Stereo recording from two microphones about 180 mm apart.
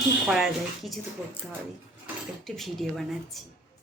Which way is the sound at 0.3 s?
Centre (ahead or behind).